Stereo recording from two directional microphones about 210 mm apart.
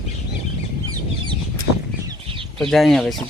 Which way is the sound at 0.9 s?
20° right (ahead or behind).